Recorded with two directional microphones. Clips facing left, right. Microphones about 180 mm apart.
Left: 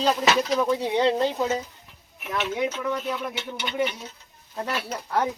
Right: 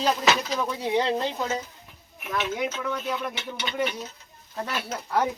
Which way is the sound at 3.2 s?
5° left (ahead or behind).